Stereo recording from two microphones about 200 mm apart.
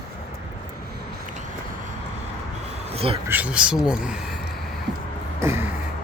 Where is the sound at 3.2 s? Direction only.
10° right (ahead or behind).